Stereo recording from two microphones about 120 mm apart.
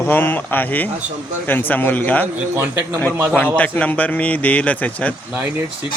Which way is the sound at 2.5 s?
20° right (ahead or behind).